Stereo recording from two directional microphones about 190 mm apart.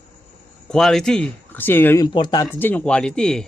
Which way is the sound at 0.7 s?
Centre (ahead or behind).